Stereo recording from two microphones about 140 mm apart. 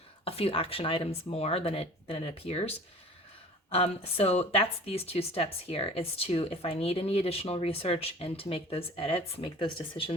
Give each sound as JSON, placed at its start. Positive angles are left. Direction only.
{"t": 0.3, "sound": "speech", "side_deg": 45}